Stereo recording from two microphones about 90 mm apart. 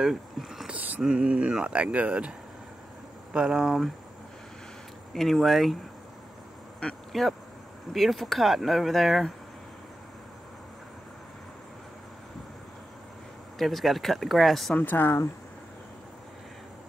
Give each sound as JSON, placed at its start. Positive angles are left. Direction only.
{"t": 0.0, "sound": "a sound", "side_deg": -5}
{"t": 0.7, "sound": "speech", "side_deg": -20}
{"t": 3.3, "sound": "speech", "side_deg": -10}
{"t": 5.1, "sound": "speech", "side_deg": 0}
{"t": 6.8, "sound": "speech", "side_deg": 5}
{"t": 13.6, "sound": "speech", "side_deg": 0}
{"t": 14.8, "sound": "speech", "side_deg": 20}